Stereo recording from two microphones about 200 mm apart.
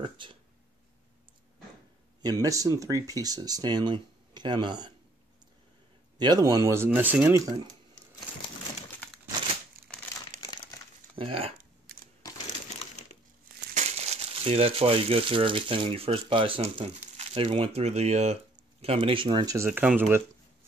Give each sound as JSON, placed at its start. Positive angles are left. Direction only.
{"t": 0.0, "sound": "speech", "side_deg": -25}
{"t": 2.2, "sound": "speech", "side_deg": -15}
{"t": 6.1, "sound": "speech", "side_deg": -20}
{"t": 11.1, "sound": "speech", "side_deg": -25}
{"t": 13.7, "sound": "speech", "side_deg": -35}